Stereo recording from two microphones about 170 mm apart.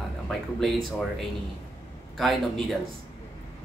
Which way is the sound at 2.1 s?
Centre (ahead or behind).